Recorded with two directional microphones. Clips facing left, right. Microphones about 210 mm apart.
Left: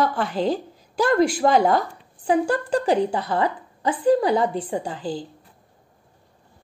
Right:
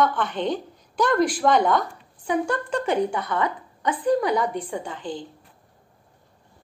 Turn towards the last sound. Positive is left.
turn(degrees=35)  # may be behind; listen again after turning